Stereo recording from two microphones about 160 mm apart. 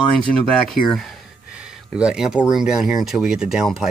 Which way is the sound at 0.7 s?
Centre (ahead or behind).